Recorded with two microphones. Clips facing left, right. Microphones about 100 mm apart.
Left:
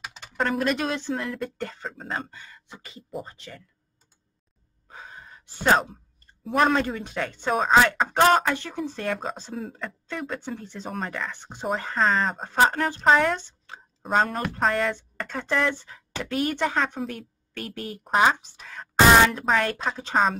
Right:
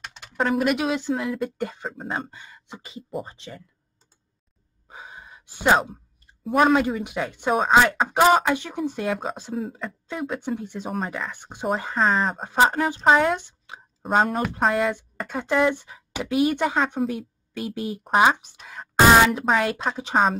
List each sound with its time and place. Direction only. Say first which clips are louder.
0.0 s speech: right 2 dB; centre (ahead or behind); by 3.6 s 20° right (ahead or behind)
4.8 s gasp: right 1 dB; 15° right (ahead or behind)
6.4 s speech: right 3 dB; 5° right (ahead or behind)